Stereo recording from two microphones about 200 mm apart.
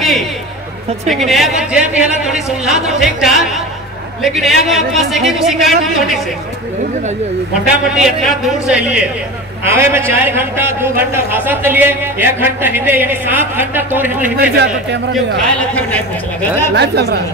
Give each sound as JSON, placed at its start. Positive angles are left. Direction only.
{"t": 1.1, "sound": "speech", "side_deg": 0}
{"t": 7.6, "sound": "a man's voice", "side_deg": -5}
{"t": 14.4, "sound": "speech", "side_deg": -55}
{"t": 16.7, "sound": "speech", "side_deg": -55}